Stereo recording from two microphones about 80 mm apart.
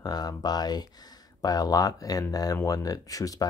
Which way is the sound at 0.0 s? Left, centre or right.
Left.